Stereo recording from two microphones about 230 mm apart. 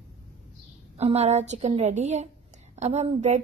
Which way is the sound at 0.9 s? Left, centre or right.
Right.